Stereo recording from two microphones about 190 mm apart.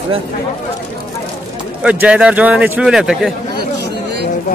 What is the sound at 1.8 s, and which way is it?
A man's voice, 5° right (ahead or behind).